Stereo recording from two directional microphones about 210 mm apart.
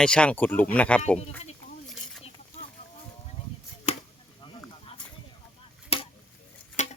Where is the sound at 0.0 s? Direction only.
5° left (ahead or behind).